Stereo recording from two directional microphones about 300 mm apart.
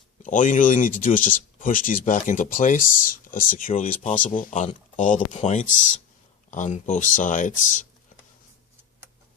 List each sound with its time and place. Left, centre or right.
0.2 s speech: left